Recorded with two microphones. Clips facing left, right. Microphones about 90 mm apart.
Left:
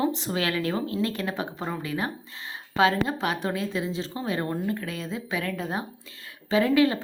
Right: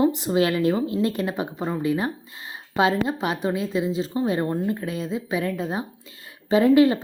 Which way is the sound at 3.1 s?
5° right (ahead or behind).